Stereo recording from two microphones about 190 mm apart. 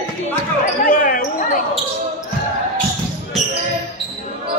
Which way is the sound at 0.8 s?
45° left (ahead or behind).